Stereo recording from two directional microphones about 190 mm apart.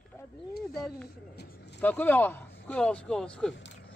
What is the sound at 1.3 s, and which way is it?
Speech, 60° left (ahead or behind).